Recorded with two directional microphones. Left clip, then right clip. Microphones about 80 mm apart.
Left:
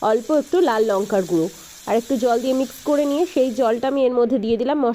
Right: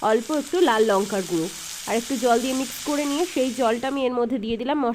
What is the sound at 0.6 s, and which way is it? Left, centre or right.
A woman's voice, left.